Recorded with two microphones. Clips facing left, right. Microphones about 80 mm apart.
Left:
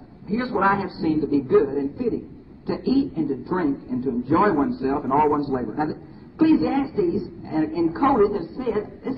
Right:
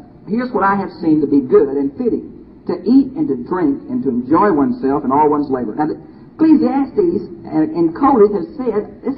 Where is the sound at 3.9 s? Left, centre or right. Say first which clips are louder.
Right 7 dB; right.